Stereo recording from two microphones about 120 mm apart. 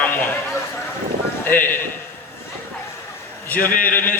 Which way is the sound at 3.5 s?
15° left (ahead or behind).